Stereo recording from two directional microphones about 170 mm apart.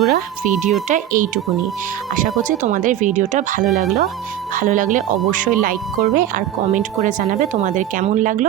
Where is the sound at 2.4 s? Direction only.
50° right (ahead or behind).